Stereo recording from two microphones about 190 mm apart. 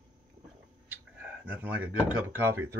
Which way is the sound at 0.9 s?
10° right (ahead or behind).